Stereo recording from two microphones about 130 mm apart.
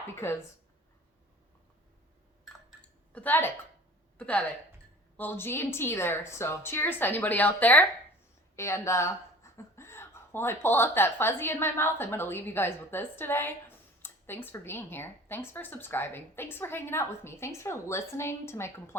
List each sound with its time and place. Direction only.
0.2 s a woman's voice: 20° left (ahead or behind)
3.1 s a woman's voice: 15° left (ahead or behind)